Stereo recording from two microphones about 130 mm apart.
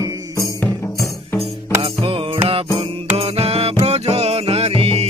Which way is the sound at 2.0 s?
45° right (ahead or behind).